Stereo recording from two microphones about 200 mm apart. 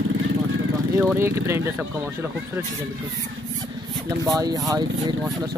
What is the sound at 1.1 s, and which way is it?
Speech, 15° right (ahead or behind).